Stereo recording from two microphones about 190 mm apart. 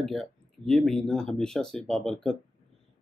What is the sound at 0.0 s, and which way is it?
Speech, centre (ahead or behind).